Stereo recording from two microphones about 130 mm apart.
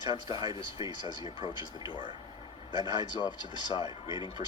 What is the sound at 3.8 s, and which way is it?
Speech, 35° right (ahead or behind).